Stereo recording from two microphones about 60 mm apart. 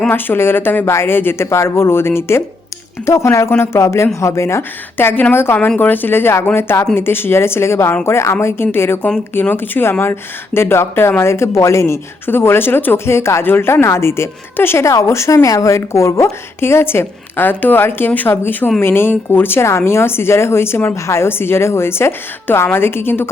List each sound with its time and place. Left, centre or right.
0.1 s a woman's voice: left
4.9 s speech: left
5.5 s a woman's voice: left
12.2 s a woman's voice: left
14.8 s speech: left
15.4 s speech: left
19.6 s a woman's voice: left